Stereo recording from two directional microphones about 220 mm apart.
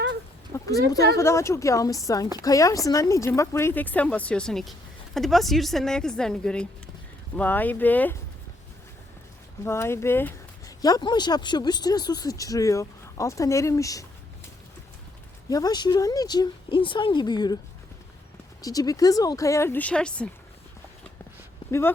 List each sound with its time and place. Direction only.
0.5 s a woman's voice: 15° left (ahead or behind)
9.6 s speech: 10° left (ahead or behind)
15.4 s speech: 15° left (ahead or behind)
18.6 s speech: 15° left (ahead or behind)
21.7 s speech: 10° left (ahead or behind)